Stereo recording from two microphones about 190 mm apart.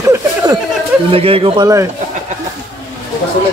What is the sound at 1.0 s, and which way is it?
Speech, 30° right (ahead or behind).